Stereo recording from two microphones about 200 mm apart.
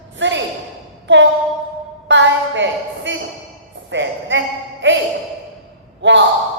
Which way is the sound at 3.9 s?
65° right (ahead or behind).